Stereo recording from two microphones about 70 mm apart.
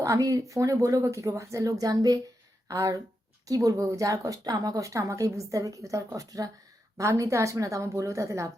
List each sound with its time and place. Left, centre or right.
0.0 s a woman's voice: right
2.6 s a woman's voice: right